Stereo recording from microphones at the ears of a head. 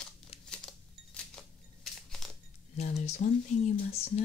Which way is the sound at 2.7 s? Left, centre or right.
Left.